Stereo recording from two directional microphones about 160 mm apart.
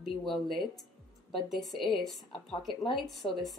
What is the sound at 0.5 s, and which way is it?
Speech, 30° left (ahead or behind).